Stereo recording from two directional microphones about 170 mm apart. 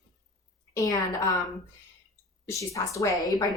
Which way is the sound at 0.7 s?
20° left (ahead or behind).